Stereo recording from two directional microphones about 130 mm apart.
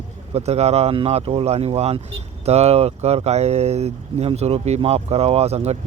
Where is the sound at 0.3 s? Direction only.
55° right (ahead or behind).